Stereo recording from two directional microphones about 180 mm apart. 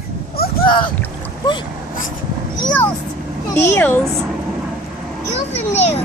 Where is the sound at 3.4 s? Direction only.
15° left (ahead or behind).